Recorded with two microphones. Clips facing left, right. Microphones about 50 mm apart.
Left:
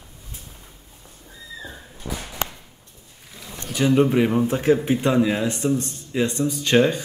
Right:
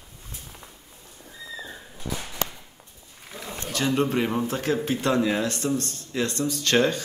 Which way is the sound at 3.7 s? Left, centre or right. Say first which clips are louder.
Left 6 dB; centre.